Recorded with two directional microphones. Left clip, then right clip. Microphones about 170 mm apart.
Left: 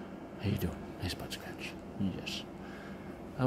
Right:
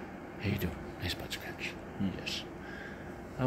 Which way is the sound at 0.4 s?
40° left (ahead or behind).